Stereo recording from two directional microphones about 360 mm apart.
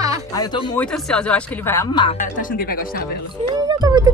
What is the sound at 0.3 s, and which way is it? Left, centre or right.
Speech, centre.